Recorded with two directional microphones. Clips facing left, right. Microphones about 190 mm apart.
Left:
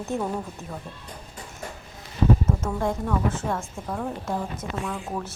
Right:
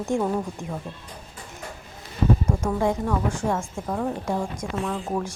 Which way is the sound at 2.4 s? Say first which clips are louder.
Right 2 dB; 5° left (ahead or behind).